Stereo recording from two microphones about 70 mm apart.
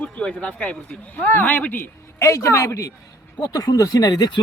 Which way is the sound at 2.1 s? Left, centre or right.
Left.